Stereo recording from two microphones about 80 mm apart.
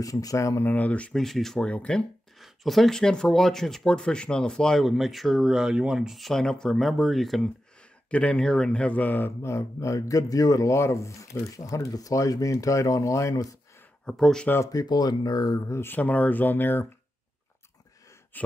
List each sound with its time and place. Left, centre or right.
0.0 s speech: left
0.7 s speech: centre
1.1 s speech: centre
2.4 s speech: centre
8.1 s speech: centre
9.4 s speech: left
14.0 s speech: centre
14.7 s speech: left
15.7 s speech: left
18.3 s speech: left